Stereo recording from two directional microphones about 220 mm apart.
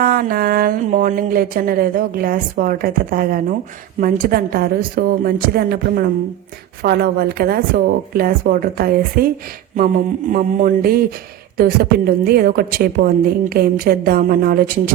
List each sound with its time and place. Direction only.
0.0 s a woman's voice: 40° right (ahead or behind)